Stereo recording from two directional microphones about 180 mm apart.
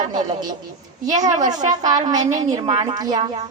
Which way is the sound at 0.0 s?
25° right (ahead or behind).